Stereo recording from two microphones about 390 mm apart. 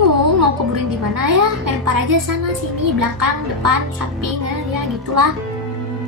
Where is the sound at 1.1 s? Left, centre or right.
Right.